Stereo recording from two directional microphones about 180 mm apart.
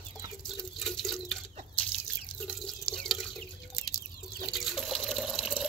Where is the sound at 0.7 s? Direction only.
Centre (ahead or behind).